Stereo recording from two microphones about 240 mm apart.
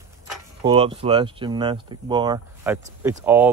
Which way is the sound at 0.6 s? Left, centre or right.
Right.